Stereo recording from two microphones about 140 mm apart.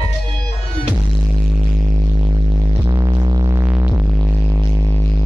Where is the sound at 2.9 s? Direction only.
30° right (ahead or behind).